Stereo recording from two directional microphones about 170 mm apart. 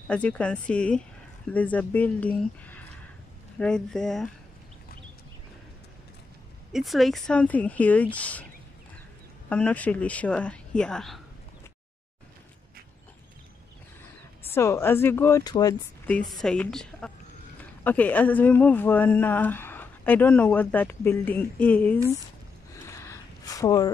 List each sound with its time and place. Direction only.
0.1 s a woman's voice: 5° left (ahead or behind)
6.7 s speech: centre (ahead or behind)
9.5 s speech: 10° left (ahead or behind)
14.5 s speech: 15° left (ahead or behind)
16.1 s a woman's voice: 5° left (ahead or behind)
22.7 s a sound: 15° left (ahead or behind)